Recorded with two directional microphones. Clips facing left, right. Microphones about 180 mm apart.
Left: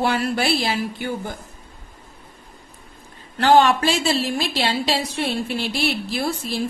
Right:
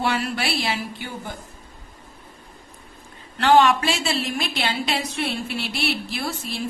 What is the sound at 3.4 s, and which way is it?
Speech, 35° left (ahead or behind).